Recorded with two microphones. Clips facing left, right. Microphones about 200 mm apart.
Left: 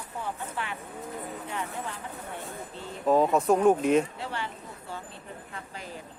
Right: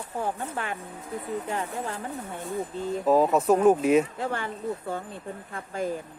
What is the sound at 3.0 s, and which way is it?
Speech, 5° right (ahead or behind).